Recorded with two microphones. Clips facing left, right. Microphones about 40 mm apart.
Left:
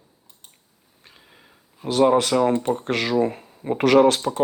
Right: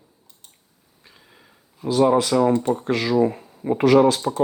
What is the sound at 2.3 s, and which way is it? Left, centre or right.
Speech, left.